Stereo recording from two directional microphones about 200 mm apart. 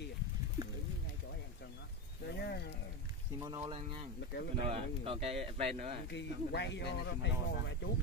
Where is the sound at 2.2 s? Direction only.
55° left (ahead or behind).